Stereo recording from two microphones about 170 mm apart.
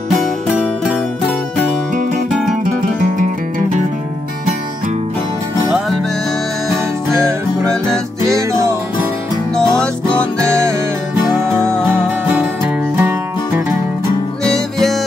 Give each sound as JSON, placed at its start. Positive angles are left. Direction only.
{"t": 7.1, "sound": "music", "side_deg": -15}
{"t": 9.7, "sound": "music", "side_deg": 5}
{"t": 10.4, "sound": "music", "side_deg": -15}
{"t": 12.4, "sound": "music", "side_deg": -10}
{"t": 14.4, "sound": "music", "side_deg": 0}